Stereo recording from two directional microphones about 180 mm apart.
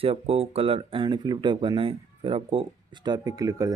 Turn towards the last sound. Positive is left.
turn(degrees=-20)  # may be behind; listen again after turning